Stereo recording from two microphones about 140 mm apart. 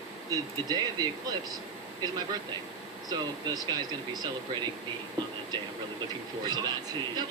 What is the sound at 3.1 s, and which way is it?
Speech, 30° right (ahead or behind).